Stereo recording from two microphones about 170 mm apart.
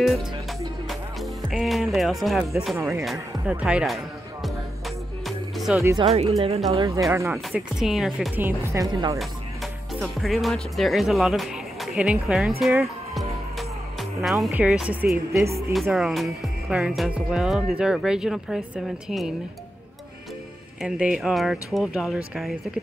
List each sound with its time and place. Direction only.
0.8 s music: centre (ahead or behind)
5.8 s speech: 15° right (ahead or behind)
6.0 s speech: 35° right (ahead or behind)
7.1 s speech: 15° right (ahead or behind)
7.5 s speech: centre (ahead or behind)
8.4 s speech: 15° right (ahead or behind)
9.2 s music: centre (ahead or behind)
14.5 s speech: 5° right (ahead or behind)
20.8 s speech: 5° right (ahead or behind)